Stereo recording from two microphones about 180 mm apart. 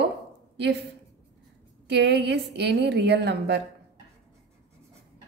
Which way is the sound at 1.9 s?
70° right (ahead or behind).